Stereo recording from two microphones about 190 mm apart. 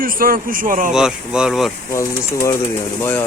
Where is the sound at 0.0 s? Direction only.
50° right (ahead or behind).